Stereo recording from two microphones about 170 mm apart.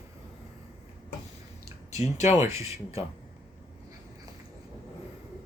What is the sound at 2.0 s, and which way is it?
Speech, 40° left (ahead or behind).